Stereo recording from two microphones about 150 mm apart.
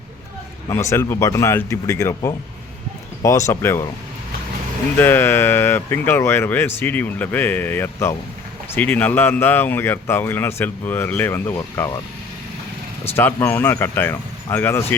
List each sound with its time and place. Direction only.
0.7 s speech: 20° left (ahead or behind)
4.9 s speech: 15° left (ahead or behind)
13.1 s speech: 15° left (ahead or behind)